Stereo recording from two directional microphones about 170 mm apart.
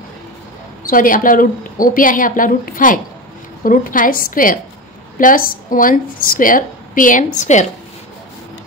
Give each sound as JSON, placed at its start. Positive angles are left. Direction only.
{"t": 0.8, "sound": "a woman's voice", "side_deg": 55}